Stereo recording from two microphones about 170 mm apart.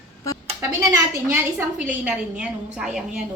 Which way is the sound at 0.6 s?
15° right (ahead or behind).